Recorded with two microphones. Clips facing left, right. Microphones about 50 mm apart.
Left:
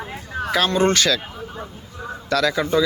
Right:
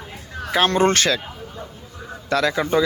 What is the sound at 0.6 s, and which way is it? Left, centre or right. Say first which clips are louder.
Speech: right 1 dB; right.